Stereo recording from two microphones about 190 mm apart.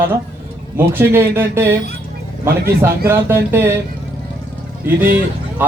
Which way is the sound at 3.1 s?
10° right (ahead or behind).